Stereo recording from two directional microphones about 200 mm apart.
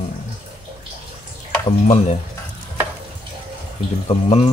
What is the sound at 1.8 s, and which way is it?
Speech, 35° left (ahead or behind).